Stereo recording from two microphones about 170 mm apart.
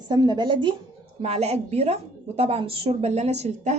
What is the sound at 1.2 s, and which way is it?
A woman's voice, 40° right (ahead or behind).